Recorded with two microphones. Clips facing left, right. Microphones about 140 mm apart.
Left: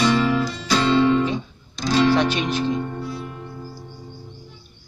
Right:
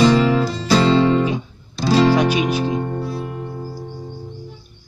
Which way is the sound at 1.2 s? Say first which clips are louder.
Right 2 dB; 10° right (ahead or behind).